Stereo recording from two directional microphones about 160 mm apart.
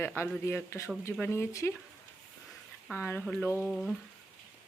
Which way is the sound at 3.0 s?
15° left (ahead or behind).